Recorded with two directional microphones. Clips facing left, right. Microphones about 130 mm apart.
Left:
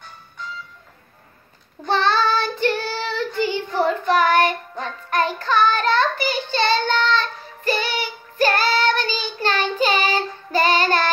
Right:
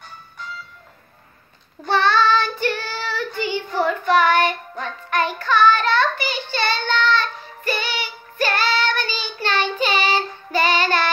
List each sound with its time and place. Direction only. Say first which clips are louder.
1.9 s child singing: right 2 dB; 35° left (ahead or behind)